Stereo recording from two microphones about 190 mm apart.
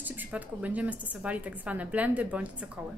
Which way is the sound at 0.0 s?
10° right (ahead or behind).